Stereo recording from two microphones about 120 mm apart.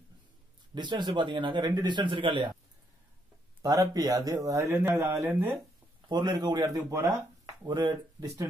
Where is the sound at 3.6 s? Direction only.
30° right (ahead or behind).